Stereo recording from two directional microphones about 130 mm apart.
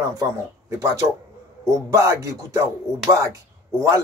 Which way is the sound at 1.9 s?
20° right (ahead or behind).